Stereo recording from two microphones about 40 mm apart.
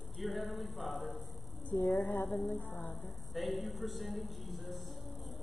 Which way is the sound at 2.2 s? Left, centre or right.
Left.